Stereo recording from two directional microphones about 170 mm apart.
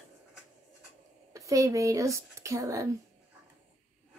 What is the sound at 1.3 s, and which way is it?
Speech, 20° right (ahead or behind).